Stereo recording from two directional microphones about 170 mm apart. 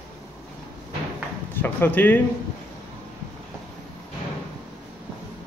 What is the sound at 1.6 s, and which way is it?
Speech, 10° left (ahead or behind).